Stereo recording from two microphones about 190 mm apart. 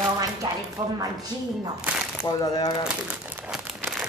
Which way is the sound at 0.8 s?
20° right (ahead or behind).